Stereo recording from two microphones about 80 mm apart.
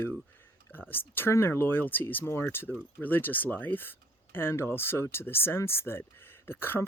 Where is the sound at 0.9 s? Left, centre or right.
Left.